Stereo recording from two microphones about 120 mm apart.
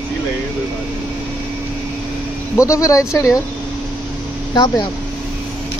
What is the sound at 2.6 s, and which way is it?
Speech, 25° left (ahead or behind).